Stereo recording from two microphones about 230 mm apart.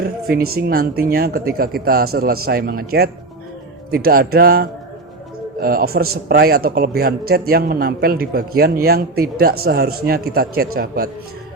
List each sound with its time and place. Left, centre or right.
0.0 s a man's voice: right